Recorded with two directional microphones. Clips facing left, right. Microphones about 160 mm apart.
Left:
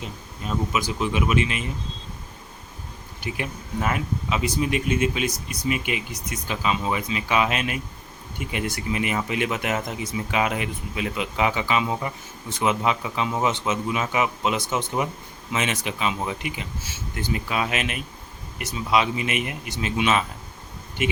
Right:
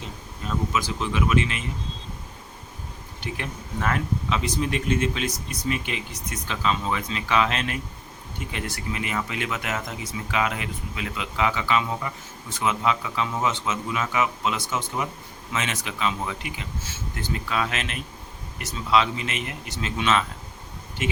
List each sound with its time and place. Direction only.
0.0 s speech: 15° left (ahead or behind)
3.2 s speech: 10° left (ahead or behind)